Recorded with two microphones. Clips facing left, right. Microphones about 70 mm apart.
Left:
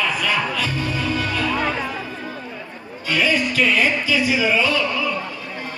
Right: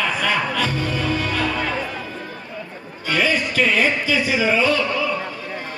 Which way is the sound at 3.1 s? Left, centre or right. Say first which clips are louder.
Even; right.